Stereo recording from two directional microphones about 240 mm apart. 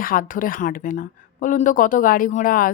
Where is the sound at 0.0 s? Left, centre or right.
Left.